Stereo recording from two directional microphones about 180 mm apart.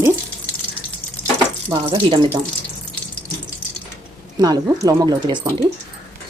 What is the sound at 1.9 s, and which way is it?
Speech, 30° right (ahead or behind).